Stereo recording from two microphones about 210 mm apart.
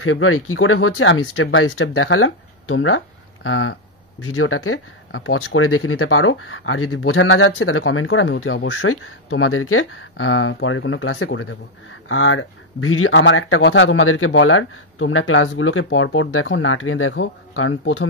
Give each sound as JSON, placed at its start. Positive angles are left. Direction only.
{"t": 0.0, "sound": "speech", "side_deg": 80}
{"t": 4.2, "sound": "speech", "side_deg": 90}